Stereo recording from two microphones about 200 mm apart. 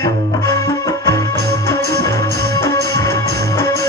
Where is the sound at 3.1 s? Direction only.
55° right (ahead or behind).